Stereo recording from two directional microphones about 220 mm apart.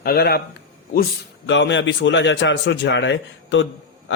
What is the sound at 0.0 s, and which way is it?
Speech, 45° left (ahead or behind).